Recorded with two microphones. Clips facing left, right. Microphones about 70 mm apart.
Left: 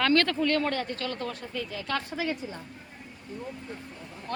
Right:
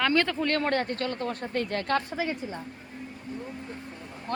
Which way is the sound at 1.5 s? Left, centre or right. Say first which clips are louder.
Right 6 dB; right.